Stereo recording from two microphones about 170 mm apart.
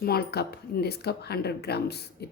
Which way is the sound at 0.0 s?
65° left (ahead or behind).